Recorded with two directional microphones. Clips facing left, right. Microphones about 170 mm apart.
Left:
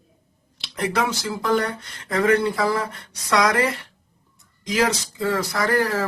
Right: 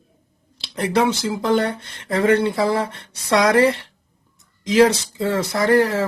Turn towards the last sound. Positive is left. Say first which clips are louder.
# right 5 dB
turn(degrees=-25)  # may be behind; listen again after turning